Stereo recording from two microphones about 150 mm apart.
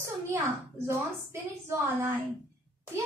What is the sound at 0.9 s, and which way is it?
A woman's voice, 20° right (ahead or behind).